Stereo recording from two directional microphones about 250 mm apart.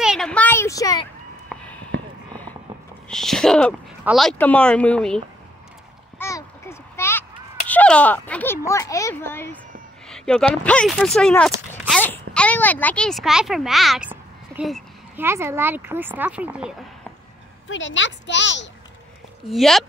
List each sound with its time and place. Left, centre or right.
0.0 s a sound: centre
3.1 s speech: centre
6.1 s a sound: centre
10.0 s speech: centre
17.6 s a woman's voice: left
19.4 s speech: centre